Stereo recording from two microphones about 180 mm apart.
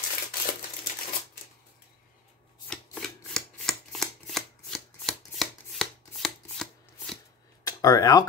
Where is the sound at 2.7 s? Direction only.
5° left (ahead or behind).